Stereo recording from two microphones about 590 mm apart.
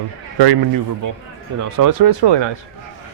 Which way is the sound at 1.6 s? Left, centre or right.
Right.